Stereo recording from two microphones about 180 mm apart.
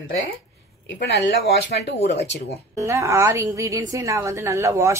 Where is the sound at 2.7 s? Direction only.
15° right (ahead or behind).